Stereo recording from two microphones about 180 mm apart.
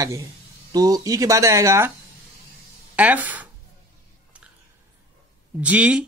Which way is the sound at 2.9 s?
10° right (ahead or behind).